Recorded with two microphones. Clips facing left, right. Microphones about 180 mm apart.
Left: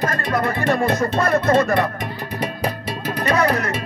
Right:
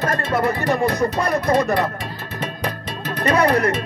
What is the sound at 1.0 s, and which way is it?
Speech, 15° right (ahead or behind).